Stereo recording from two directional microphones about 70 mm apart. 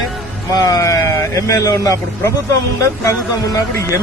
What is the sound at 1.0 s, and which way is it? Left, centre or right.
Speech, left.